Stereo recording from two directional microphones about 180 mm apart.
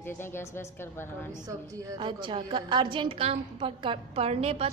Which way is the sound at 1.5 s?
20° right (ahead or behind).